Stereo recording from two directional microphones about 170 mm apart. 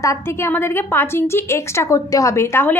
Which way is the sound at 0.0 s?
15° left (ahead or behind).